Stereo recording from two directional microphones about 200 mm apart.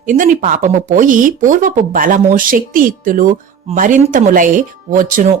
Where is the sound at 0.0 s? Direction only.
40° right (ahead or behind).